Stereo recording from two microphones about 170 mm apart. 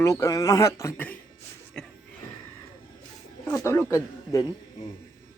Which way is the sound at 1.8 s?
5° left (ahead or behind).